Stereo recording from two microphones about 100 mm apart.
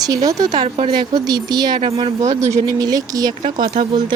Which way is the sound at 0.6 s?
70° right (ahead or behind).